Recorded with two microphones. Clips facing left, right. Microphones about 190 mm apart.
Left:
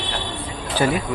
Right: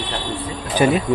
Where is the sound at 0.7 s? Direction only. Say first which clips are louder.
Right 4 dB; 15° right (ahead or behind).